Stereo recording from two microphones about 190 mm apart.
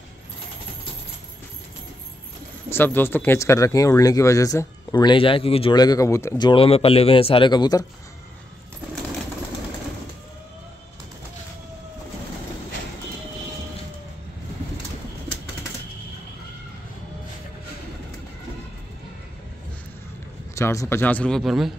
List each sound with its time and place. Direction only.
2.7 s speech: 10° left (ahead or behind)
20.5 s speech: 15° left (ahead or behind); by 21.7 s centre (ahead or behind)